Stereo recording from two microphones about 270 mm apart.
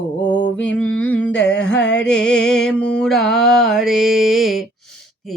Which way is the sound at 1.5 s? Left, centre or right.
Left.